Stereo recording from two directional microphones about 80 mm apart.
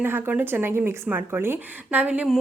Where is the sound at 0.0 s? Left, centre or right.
Right.